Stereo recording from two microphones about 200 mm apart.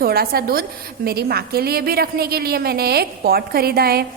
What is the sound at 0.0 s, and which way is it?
A woman's voice, 50° right (ahead or behind).